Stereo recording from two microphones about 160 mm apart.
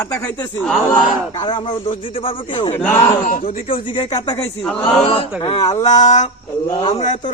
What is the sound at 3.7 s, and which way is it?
Speech, 30° left (ahead or behind).